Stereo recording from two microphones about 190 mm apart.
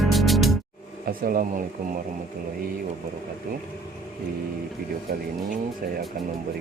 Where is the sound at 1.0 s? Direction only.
50° right (ahead or behind).